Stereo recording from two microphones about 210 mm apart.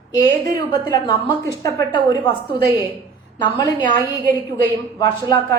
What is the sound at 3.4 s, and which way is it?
Speech, 20° left (ahead or behind).